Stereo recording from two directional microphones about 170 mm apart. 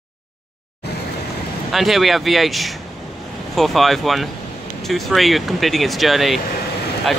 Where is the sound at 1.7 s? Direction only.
Centre (ahead or behind).